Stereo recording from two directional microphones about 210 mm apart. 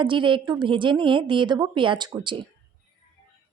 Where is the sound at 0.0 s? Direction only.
25° right (ahead or behind).